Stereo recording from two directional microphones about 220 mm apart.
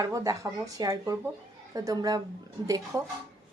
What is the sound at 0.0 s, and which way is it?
A woman's voice, 15° right (ahead or behind).